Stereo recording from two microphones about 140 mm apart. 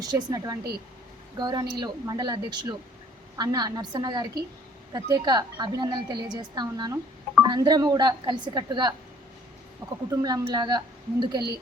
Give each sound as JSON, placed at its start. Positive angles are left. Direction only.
{"t": 0.1, "sound": "a woman's voice", "side_deg": -30}
{"t": 10.1, "sound": "a woman's voice", "side_deg": -25}